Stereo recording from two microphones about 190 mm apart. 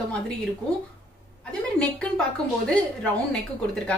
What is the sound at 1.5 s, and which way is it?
Speech, 5° left (ahead or behind).